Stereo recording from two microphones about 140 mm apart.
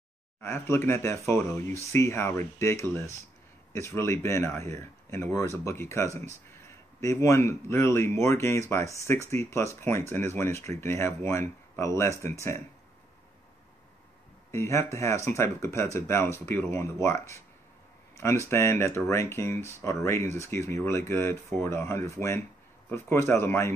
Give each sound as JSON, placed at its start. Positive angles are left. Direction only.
{"t": 0.4, "sound": "speech", "side_deg": 15}
{"t": 14.5, "sound": "speech", "side_deg": 20}